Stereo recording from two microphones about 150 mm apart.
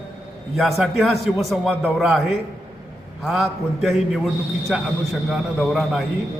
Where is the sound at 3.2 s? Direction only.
Centre (ahead or behind).